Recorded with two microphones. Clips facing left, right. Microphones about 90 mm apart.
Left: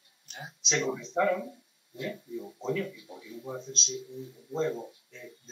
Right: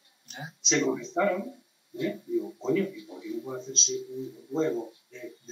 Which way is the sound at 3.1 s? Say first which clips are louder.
Right 8 dB; 20° right (ahead or behind).